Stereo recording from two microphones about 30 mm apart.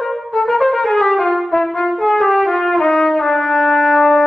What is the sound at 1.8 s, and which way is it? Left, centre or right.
Brass instrument, centre.